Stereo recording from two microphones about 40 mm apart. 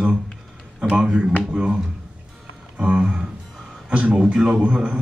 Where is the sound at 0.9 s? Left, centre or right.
Right.